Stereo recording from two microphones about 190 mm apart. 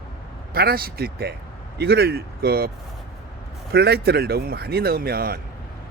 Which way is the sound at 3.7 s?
60° right (ahead or behind).